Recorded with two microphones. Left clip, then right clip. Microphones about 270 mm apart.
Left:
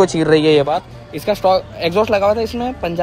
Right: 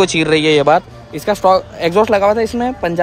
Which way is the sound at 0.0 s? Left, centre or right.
Centre.